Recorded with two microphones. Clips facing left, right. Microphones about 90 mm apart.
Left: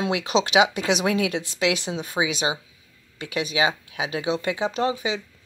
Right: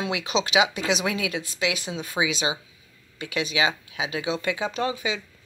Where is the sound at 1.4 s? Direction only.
75° left (ahead or behind).